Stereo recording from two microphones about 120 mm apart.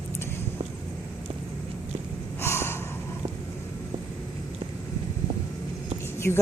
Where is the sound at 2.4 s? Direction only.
20° left (ahead or behind).